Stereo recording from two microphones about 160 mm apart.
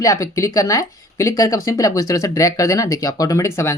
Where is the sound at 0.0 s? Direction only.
20° left (ahead or behind).